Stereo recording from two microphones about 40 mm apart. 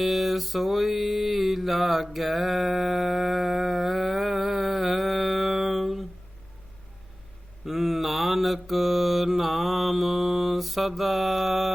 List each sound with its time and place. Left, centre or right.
0.0 s mantra: centre
7.6 s mantra: centre